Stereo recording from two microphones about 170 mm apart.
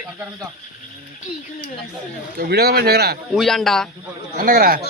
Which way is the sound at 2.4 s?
70° right (ahead or behind).